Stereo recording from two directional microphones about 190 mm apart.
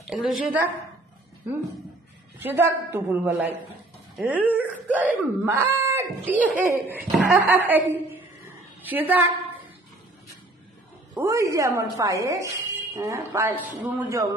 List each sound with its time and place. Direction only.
0.0 s a woman's voice: 5° right (ahead or behind)
2.4 s speech: 10° right (ahead or behind)
11.1 s speech: 15° right (ahead or behind)